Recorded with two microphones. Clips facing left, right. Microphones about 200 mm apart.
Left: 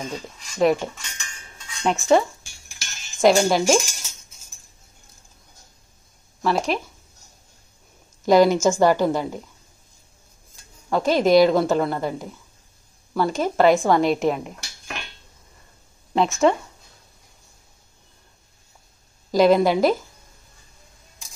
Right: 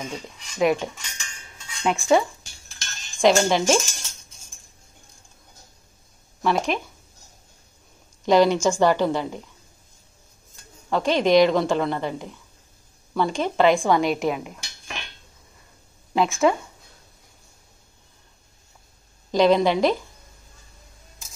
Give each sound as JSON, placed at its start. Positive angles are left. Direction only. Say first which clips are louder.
{"t": 0.0, "sound": "speech", "louder": "left 2 dB", "side_deg": 0}
{"t": 2.7, "sound": "cutlery", "louder": "right 1 dB", "side_deg": 10}
{"t": 6.4, "sound": "speech", "louder": "left 1 dB", "side_deg": 0}
{"t": 8.3, "sound": "a woman's voice", "louder": "left 2 dB", "side_deg": 10}
{"t": 10.9, "sound": "a woman's voice", "louder": "left 2 dB", "side_deg": 5}
{"t": 13.8, "sound": "cutlery", "louder": "left 2 dB", "side_deg": 0}
{"t": 16.1, "sound": "speech", "louder": "left 1 dB", "side_deg": 0}
{"t": 19.3, "sound": "a woman's voice", "louder": "left 2 dB", "side_deg": 5}